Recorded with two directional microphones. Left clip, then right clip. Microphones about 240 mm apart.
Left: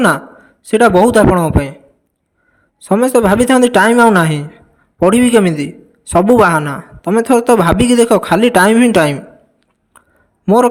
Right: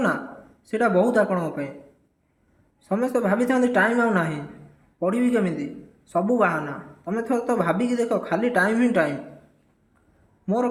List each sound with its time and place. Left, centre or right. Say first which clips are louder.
0.6 s a woman's voice: left 12 dB; left
2.8 s a woman's voice: left 13 dB; left
10.4 s a man's voice: left 14 dB; left